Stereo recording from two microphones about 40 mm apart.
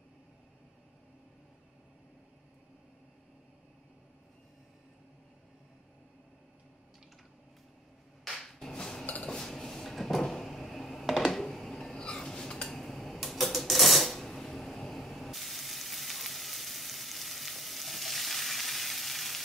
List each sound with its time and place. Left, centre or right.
8.2 s music: centre
9.1 s dishes: left
9.5 s drawer open or close: centre
11.4 s a sound: centre
14.2 s water tap: centre